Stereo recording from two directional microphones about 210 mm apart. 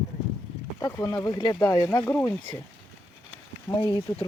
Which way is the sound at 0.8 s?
15° left (ahead or behind).